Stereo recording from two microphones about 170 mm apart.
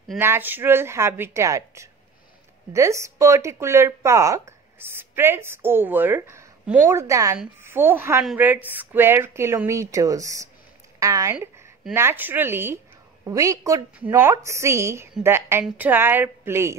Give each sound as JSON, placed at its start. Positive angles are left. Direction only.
{"t": 0.2, "sound": "a woman's voice", "side_deg": -10}